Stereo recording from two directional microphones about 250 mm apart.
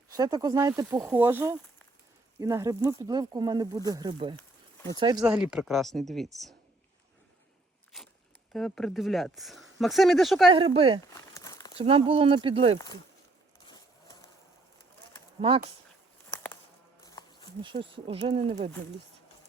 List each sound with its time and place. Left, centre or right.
0.1 s speech: centre
5.2 s speech: centre
7.9 s speech: centre
10.5 s speech: right
11.0 s crumpling: centre
11.8 s speech: right
15.4 s speech: right
17.0 s insect: centre
17.6 s speech: centre